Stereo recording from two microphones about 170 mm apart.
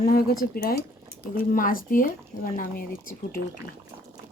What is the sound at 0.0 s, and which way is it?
Speech, 60° left (ahead or behind).